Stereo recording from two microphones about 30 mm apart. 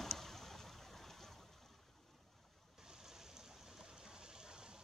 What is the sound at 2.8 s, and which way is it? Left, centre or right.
Stream, centre.